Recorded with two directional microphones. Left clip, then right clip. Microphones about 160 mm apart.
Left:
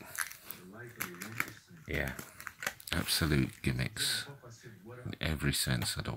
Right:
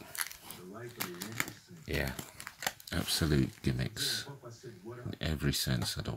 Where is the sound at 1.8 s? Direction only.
5° right (ahead or behind).